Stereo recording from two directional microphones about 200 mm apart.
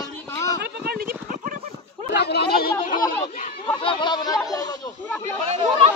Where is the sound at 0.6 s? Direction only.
50° right (ahead or behind).